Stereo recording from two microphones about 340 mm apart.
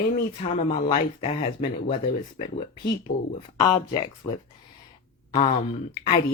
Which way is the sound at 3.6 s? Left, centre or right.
Centre.